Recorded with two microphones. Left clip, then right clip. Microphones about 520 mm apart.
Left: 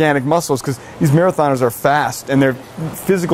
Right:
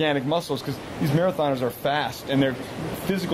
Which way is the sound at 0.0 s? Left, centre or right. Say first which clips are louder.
Left 9 dB; left.